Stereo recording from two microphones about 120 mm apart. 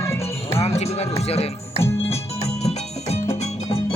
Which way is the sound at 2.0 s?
60° left (ahead or behind).